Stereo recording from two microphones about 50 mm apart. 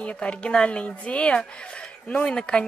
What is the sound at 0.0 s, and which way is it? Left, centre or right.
A woman's voice, left.